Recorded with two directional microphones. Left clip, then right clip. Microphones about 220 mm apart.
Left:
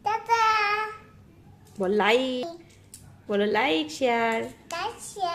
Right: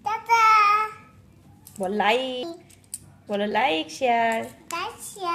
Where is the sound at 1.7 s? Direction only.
20° left (ahead or behind).